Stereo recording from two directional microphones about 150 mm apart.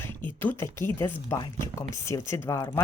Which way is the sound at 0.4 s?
15° left (ahead or behind).